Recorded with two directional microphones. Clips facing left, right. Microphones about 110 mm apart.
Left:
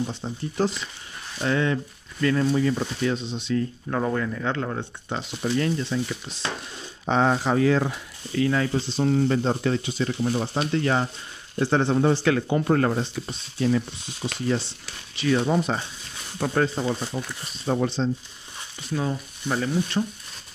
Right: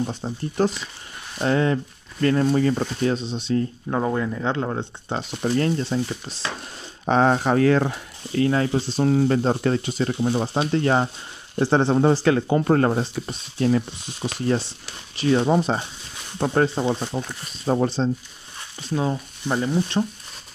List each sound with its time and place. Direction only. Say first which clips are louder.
0.1 s speech: right 2 dB; 45° right (ahead or behind)
3.9 s speech: right 2 dB; 20° right (ahead or behind)
5.1 s speech: right 3 dB; 40° right (ahead or behind)
7.1 s speech: right 3 dB; 50° right (ahead or behind)
8.4 s speech: right 2 dB; 40° right (ahead or behind)
15.1 s speech: right 3 dB; 30° right (ahead or behind)
17.1 s speech: right 3 dB; 70° right (ahead or behind)
17.6 s speech: right 3 dB; 40° right (ahead or behind)
18.9 s speech: right 3 dB; 25° right (ahead or behind)